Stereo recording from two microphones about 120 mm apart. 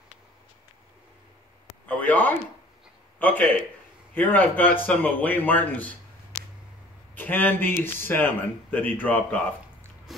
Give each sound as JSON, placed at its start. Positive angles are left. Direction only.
{"t": 1.9, "sound": "speech", "side_deg": 15}
{"t": 6.3, "sound": "a sound", "side_deg": -5}
{"t": 7.2, "sound": "speech", "side_deg": 15}